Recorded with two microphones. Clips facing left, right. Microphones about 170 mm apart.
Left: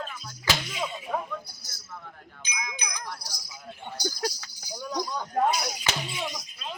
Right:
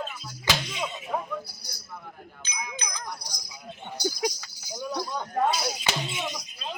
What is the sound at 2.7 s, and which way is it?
Wind chime, 10° left (ahead or behind).